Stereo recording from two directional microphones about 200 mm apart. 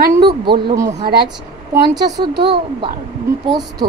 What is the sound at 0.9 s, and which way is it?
Speech, 50° right (ahead or behind).